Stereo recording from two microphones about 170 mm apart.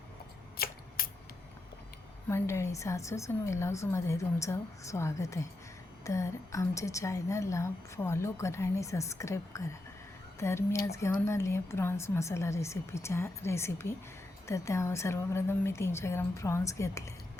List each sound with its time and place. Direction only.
0.5 s shuffling cards: 60° left (ahead or behind)
2.3 s a woman's voice: 15° left (ahead or behind)